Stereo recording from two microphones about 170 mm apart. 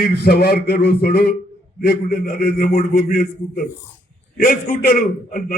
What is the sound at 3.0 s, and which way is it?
Speech, 40° left (ahead or behind).